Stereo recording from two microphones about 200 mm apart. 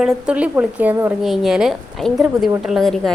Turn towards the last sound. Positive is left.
turn(degrees=0)  # may be behind; listen again after turning